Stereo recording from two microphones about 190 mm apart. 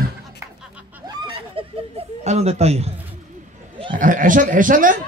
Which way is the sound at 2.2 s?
35° right (ahead or behind).